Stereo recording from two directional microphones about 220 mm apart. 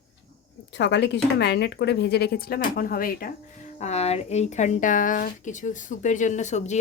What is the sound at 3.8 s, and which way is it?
Speech, 30° left (ahead or behind).